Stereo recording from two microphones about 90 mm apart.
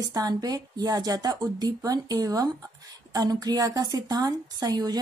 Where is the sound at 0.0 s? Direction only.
45° right (ahead or behind).